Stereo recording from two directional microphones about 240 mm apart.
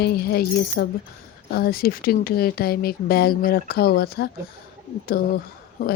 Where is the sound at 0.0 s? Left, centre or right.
Left.